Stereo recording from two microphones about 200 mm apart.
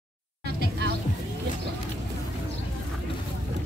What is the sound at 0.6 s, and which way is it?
Music, 55° right (ahead or behind).